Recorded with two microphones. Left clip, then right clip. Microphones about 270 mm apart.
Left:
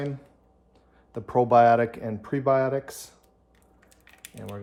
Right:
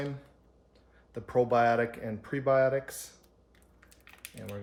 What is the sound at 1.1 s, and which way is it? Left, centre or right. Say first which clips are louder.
Speech: left 7 dB; centre.